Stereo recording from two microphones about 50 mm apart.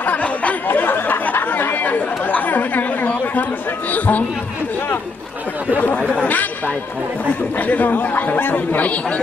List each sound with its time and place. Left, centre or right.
0.0 s chatter: left
0.7 s chatter: left
3.9 s speech: left
5.9 s chatter: left
7.5 s speech: left